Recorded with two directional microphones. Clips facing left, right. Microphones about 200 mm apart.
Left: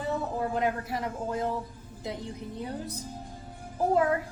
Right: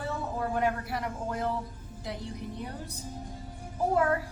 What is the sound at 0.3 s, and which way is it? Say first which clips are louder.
A woman's voice: right 2 dB; 20° left (ahead or behind).